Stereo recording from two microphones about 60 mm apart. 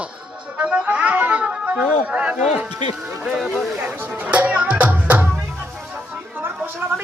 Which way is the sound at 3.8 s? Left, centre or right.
Right.